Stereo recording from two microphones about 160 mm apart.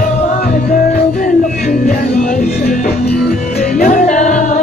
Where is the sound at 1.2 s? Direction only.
65° left (ahead or behind).